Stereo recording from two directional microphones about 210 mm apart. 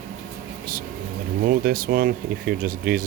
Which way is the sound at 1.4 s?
45° right (ahead or behind).